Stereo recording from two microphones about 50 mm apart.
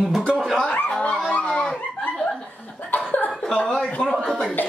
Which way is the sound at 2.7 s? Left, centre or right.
Left.